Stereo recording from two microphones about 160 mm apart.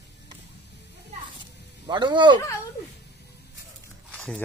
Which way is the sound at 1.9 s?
30° right (ahead or behind).